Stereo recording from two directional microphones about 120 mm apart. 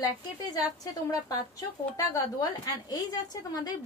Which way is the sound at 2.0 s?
30° left (ahead or behind).